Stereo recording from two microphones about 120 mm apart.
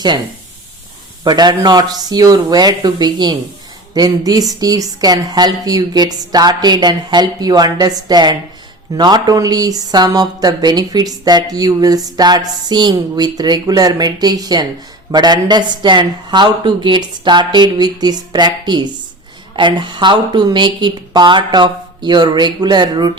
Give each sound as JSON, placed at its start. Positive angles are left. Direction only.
{"t": 1.2, "sound": "speech", "side_deg": -35}